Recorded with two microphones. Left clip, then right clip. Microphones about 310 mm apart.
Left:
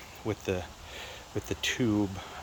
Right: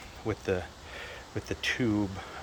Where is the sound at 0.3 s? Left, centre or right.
Centre.